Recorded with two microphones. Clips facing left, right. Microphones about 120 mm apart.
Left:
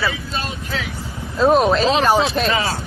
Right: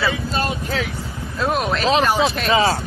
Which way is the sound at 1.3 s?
30° left (ahead or behind).